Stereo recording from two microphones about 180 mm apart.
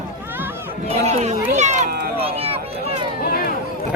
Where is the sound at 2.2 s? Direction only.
35° right (ahead or behind).